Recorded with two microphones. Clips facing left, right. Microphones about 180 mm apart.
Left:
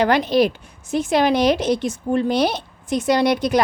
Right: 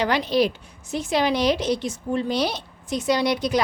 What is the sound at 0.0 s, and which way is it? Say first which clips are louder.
A woman's voice: left 4 dB; 50° left (ahead or behind).